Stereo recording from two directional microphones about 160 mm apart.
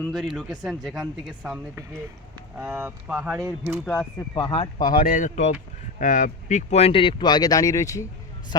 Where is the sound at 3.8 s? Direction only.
15° left (ahead or behind).